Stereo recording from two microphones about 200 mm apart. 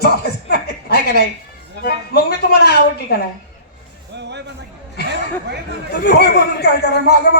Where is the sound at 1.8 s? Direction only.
50° left (ahead or behind).